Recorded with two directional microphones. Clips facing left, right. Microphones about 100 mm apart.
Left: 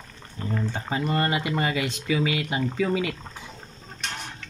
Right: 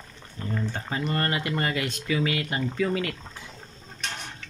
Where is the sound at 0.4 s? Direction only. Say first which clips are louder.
Left 2 dB; 10° left (ahead or behind).